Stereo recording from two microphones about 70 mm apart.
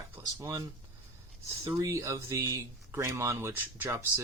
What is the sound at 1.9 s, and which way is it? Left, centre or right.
Speech, right.